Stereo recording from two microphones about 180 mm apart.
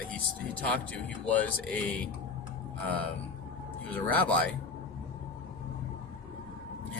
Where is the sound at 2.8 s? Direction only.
10° left (ahead or behind).